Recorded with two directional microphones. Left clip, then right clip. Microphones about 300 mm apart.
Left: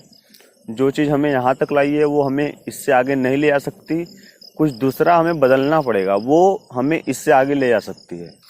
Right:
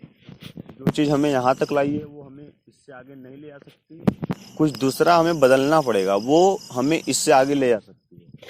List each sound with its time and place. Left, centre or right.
0.9 s speech: centre; by 3.6 s left
4.5 s speech: centre